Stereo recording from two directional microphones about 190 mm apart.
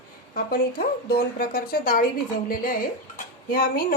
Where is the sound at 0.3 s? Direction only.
50° left (ahead or behind).